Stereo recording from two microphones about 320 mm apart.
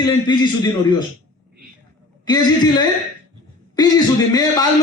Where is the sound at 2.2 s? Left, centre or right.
Centre.